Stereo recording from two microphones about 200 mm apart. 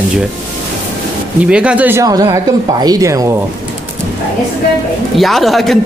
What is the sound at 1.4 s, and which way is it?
Speech, 5° right (ahead or behind).